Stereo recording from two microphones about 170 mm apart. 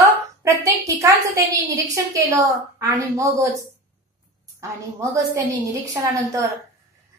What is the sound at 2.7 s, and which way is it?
Speech, 20° right (ahead or behind).